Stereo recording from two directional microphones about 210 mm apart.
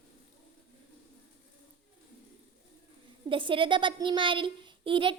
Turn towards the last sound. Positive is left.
turn(degrees=-25)  # may be behind; listen again after turning